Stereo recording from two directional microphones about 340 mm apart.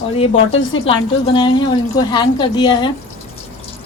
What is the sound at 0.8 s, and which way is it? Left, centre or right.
A woman's voice, centre.